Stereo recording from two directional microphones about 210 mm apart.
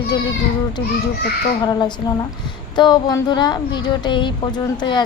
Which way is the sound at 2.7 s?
20° left (ahead or behind).